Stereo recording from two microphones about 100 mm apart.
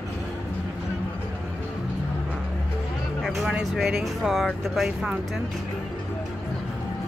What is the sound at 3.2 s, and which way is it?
Speech, centre (ahead or behind).